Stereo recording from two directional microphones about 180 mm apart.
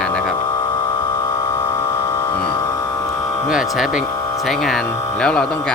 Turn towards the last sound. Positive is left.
turn(degrees=5)  # may be behind; listen again after turning